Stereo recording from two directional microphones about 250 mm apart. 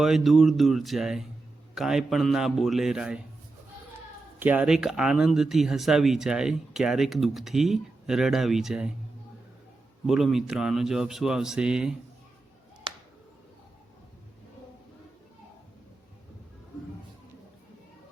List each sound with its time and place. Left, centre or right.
0.0 s speech: centre
4.4 s speech: centre
10.1 s speech: centre